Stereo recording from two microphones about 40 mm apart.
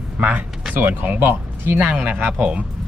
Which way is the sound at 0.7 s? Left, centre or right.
Right.